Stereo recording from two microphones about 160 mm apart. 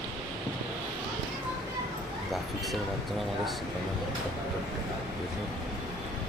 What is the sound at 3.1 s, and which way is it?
Speech, centre (ahead or behind).